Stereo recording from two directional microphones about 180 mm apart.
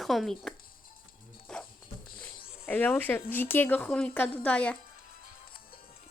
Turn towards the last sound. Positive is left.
turn(degrees=5)  # may be behind; listen again after turning